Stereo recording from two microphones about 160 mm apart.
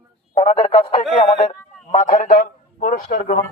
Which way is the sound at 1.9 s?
50° left (ahead or behind).